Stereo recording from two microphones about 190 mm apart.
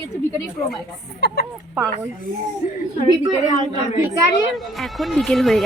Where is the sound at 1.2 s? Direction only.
60° left (ahead or behind).